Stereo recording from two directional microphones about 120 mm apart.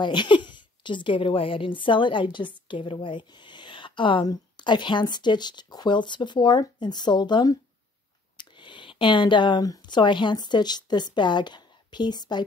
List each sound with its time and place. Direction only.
0.0 s a woman's voice: 40° left (ahead or behind)